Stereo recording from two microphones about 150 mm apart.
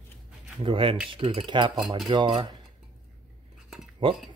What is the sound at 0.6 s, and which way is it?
Speech, 35° right (ahead or behind).